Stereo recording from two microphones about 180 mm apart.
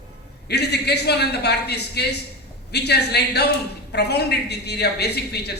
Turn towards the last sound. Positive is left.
turn(degrees=65)  # may be behind; listen again after turning